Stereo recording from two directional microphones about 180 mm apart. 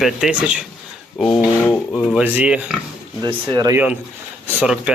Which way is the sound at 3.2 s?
20° right (ahead or behind).